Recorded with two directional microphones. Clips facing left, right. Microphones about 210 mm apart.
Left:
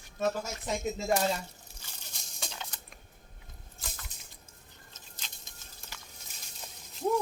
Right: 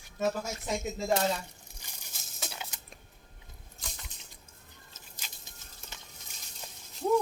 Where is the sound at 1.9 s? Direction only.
10° right (ahead or behind).